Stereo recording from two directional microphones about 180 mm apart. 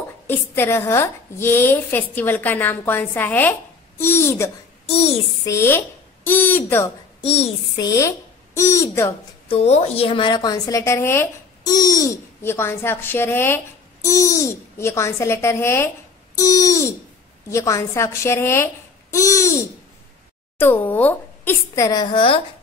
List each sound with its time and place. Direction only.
0.3 s a woman's voice: 15° left (ahead or behind)
4.8 s a child's voice: 35° left (ahead or behind)
5.4 s speech: 15° left (ahead or behind)
7.2 s a child's voice: 35° left (ahead or behind)
7.8 s a woman's voice: 20° left (ahead or behind)
9.5 s a woman's voice: 35° left (ahead or behind); by 15.9 s 15° left (ahead or behind)
16.3 s a sound: 20° left (ahead or behind)
17.5 s a woman's voice: 15° left (ahead or behind)